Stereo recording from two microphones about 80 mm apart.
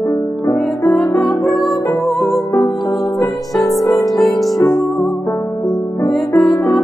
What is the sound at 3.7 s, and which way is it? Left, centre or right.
Music, left.